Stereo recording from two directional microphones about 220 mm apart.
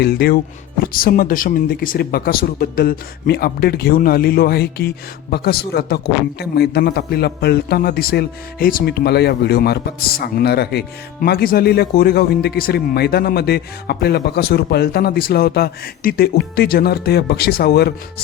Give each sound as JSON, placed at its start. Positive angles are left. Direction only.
{"t": 0.0, "sound": "a man's voice", "side_deg": 45}